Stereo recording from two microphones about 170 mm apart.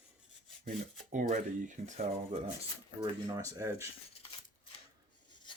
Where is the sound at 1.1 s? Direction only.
50° right (ahead or behind).